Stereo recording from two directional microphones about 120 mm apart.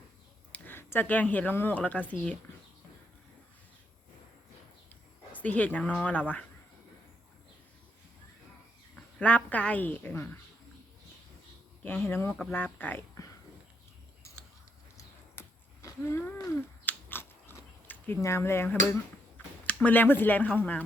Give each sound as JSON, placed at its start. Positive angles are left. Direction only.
{"t": 0.5, "sound": "speech", "side_deg": 15}
{"t": 5.3, "sound": "speech", "side_deg": 10}
{"t": 9.0, "sound": "speech", "side_deg": 10}
{"t": 11.8, "sound": "speech", "side_deg": 15}
{"t": 14.9, "sound": "a sound", "side_deg": 25}
{"t": 19.6, "sound": "speech", "side_deg": 10}